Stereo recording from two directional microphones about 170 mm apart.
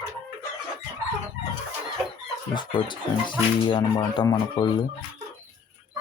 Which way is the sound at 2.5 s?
25° left (ahead or behind).